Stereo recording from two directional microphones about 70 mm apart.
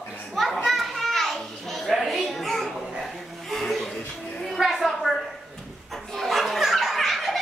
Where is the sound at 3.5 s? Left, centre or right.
Centre.